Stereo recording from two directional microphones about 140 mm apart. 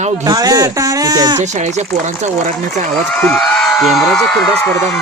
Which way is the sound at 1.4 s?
55° right (ahead or behind).